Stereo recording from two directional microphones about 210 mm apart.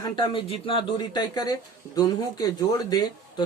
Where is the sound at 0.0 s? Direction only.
25° left (ahead or behind).